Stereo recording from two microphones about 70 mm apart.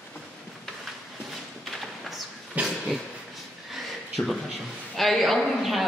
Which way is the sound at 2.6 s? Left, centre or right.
Right.